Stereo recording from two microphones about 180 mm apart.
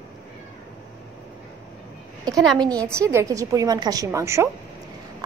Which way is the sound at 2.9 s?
15° right (ahead or behind).